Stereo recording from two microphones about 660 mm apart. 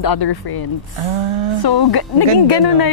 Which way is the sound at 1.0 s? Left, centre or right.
Right.